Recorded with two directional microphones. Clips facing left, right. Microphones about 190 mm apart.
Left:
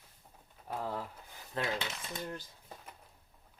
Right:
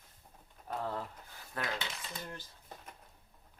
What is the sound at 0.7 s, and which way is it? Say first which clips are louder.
Speech: even; 10° left (ahead or behind).